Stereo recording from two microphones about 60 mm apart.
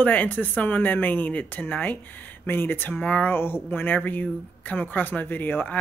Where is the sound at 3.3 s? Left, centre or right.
Left.